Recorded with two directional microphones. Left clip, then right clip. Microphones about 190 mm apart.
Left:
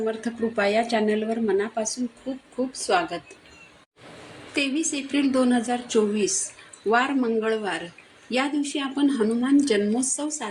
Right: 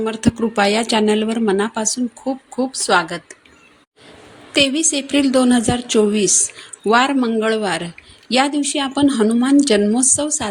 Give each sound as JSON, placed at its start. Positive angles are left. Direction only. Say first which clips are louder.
{"t": 0.0, "sound": "speech", "louder": "right 7 dB", "side_deg": -55}
{"t": 4.5, "sound": "speech", "louder": "right 10 dB", "side_deg": -55}